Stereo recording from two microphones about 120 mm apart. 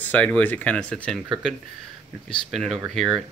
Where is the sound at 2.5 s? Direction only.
Centre (ahead or behind).